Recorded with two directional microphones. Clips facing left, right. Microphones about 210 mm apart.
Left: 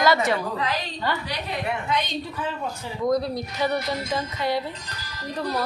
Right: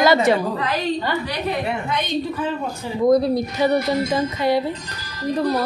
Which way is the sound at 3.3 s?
25° right (ahead or behind).